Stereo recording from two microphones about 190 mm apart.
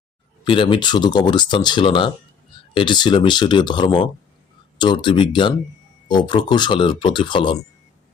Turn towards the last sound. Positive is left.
turn(degrees=25)  # may be behind; listen again after turning